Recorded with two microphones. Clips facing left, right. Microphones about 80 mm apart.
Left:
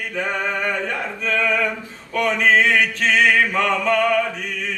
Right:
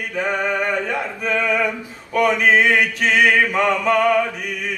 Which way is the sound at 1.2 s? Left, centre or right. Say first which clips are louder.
Even; centre.